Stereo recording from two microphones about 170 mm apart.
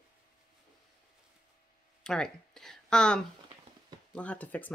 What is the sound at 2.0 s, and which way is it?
Speech, 5° left (ahead or behind).